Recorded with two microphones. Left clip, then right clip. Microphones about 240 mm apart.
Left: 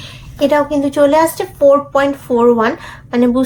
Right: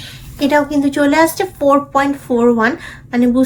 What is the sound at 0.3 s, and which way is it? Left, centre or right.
A woman's voice, centre.